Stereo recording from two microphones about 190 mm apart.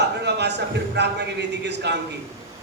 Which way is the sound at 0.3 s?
60° right (ahead or behind).